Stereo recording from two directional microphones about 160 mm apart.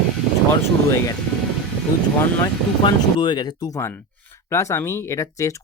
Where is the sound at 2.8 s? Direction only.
25° left (ahead or behind).